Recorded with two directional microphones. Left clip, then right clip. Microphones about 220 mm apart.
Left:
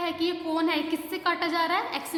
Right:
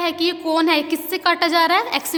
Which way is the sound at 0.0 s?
45° right (ahead or behind).